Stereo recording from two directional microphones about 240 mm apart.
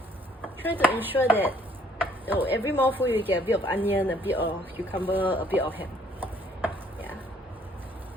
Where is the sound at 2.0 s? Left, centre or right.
Centre.